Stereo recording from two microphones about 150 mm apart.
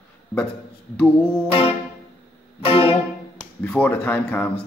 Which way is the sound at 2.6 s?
35° left (ahead or behind).